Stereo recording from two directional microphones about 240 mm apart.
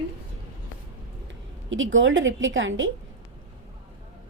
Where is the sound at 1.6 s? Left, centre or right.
Right.